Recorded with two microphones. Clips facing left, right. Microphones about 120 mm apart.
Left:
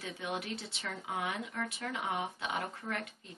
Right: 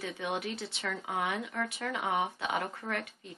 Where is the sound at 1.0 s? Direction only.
90° right.